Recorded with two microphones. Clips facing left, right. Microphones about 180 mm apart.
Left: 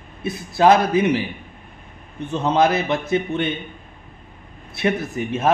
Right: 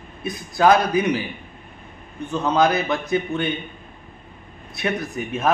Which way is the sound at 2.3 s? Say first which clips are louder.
Left 1 dB; 25° left (ahead or behind).